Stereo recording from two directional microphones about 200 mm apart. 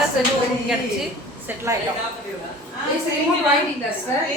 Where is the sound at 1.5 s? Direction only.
10° right (ahead or behind).